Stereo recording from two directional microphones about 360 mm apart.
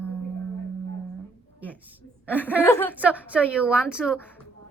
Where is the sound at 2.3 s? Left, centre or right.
Centre.